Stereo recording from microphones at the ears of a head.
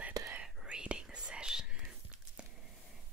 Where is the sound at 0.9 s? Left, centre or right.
Centre.